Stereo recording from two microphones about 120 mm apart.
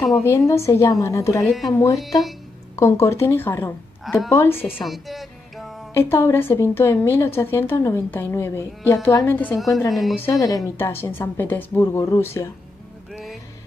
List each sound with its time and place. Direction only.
0.5 s a woman's voice: 25° left (ahead or behind)
1.4 s speech: centre (ahead or behind)
1.7 s a woman's voice: 25° left (ahead or behind)
2.0 s speech: centre (ahead or behind)
2.7 s a woman's voice: 25° left (ahead or behind)
4.0 s a woman's voice: centre (ahead or behind)
4.3 s a woman's voice: 20° left (ahead or behind)
4.8 s music: centre (ahead or behind)
5.9 s a woman's voice: 20° left (ahead or behind)
9.8 s speech: centre (ahead or behind)
10.4 s a woman's voice: 25° left (ahead or behind)